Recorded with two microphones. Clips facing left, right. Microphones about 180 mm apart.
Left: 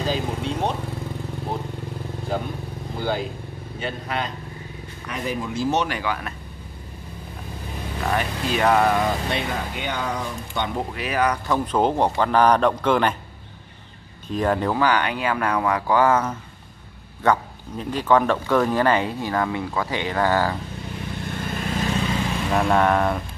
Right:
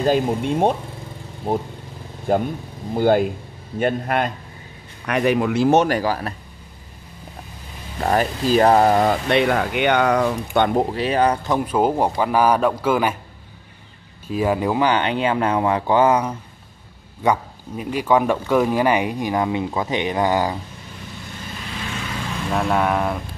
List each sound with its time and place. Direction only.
0.0 s speech: 50° right (ahead or behind)
5.0 s speech: 70° right (ahead or behind); by 6.3 s 35° right (ahead or behind)
8.0 s speech: 40° right (ahead or behind)
9.0 s speech: 70° right (ahead or behind)
10.8 s speech: 30° right (ahead or behind)
11.5 s speech: 10° right (ahead or behind)
14.2 s speech: 5° right (ahead or behind)
21.3 s vehicle: 50° left (ahead or behind)
22.5 s speech: centre (ahead or behind)